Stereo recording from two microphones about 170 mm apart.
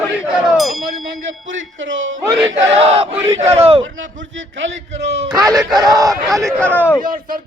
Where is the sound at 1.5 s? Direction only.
90° right.